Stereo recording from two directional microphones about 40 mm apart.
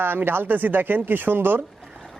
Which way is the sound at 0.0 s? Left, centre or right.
Right.